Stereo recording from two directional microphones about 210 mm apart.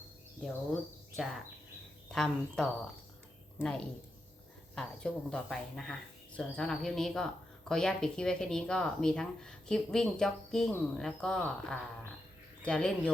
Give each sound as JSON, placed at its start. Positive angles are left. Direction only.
{"t": 1.1, "sound": "speech", "side_deg": 0}